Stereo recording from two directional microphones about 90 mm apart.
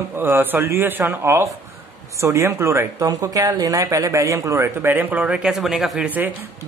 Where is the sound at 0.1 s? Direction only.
25° right (ahead or behind).